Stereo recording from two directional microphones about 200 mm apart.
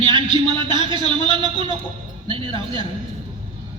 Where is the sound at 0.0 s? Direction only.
25° right (ahead or behind).